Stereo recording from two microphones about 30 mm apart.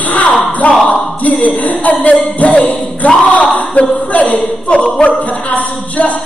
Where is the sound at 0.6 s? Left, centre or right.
Left.